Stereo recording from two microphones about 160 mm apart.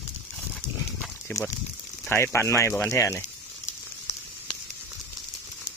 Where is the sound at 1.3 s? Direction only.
15° left (ahead or behind).